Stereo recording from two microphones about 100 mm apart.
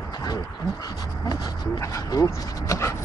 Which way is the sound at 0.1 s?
40° left (ahead or behind).